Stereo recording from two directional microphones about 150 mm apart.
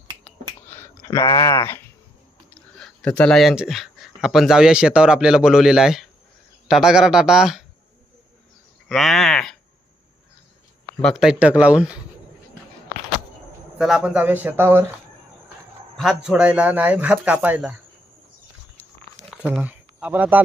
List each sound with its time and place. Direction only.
0.6 s a sound: 15° left (ahead or behind)
1.1 s speech: 30° left (ahead or behind)
2.6 s speech: 5° left (ahead or behind)
8.9 s speech: centre (ahead or behind)
10.9 s speech: centre (ahead or behind)
13.7 s speech: 5° right (ahead or behind)
16.0 s speech: centre (ahead or behind)
19.6 s speech: 10° right (ahead or behind)